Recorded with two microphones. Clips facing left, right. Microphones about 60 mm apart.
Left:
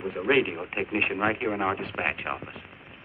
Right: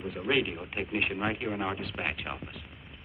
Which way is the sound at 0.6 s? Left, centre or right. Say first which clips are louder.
Left 4 dB; left.